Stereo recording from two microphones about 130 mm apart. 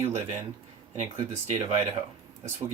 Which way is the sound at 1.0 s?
60° right (ahead or behind).